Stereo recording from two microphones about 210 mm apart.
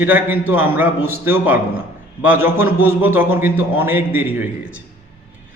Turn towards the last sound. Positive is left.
turn(degrees=-10)  # may be behind; listen again after turning